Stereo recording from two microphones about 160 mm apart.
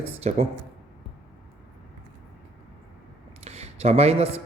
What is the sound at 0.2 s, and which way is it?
Speech, 40° right (ahead or behind).